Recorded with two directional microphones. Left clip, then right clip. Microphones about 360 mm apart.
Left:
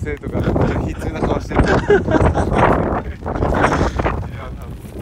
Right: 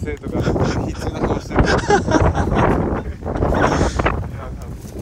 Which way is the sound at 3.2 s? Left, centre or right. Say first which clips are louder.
Left 1 dB; centre.